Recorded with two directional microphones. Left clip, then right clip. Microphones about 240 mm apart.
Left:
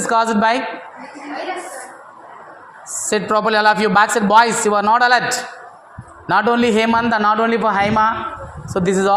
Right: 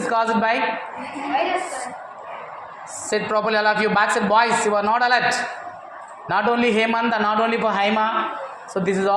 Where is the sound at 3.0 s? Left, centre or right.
Left.